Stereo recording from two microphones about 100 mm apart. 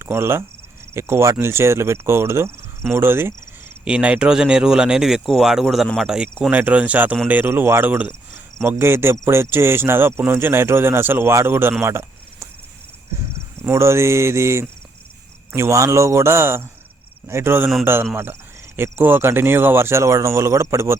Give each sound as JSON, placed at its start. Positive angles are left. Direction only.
{"t": 0.0, "sound": "cricket", "side_deg": -25}
{"t": 0.9, "sound": "speech", "side_deg": -25}
{"t": 3.8, "sound": "speech", "side_deg": -10}
{"t": 6.5, "sound": "speech", "side_deg": -15}
{"t": 11.8, "sound": "a sound", "side_deg": -25}
{"t": 13.7, "sound": "speech", "side_deg": -25}